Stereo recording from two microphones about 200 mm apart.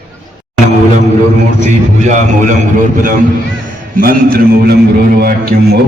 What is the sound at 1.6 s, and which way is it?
Speech, 40° right (ahead or behind).